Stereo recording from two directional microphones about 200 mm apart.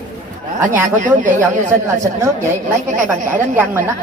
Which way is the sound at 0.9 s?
40° right (ahead or behind).